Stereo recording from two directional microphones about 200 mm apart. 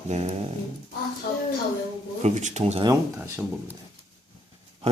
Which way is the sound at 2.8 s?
15° right (ahead or behind).